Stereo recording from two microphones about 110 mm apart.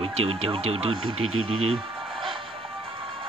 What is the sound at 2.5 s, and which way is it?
Music, 55° right (ahead or behind).